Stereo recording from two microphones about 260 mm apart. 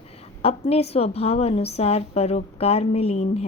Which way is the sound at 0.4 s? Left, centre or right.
Left.